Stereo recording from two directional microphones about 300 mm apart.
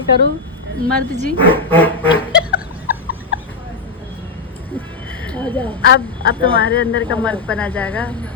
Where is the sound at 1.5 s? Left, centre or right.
Centre.